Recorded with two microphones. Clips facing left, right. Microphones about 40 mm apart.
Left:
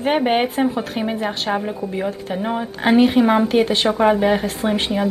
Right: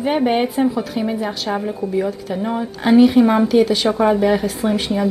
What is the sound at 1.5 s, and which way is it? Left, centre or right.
Speech, left.